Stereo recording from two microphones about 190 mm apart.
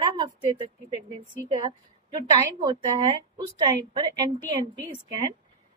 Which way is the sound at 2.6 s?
25° right (ahead or behind).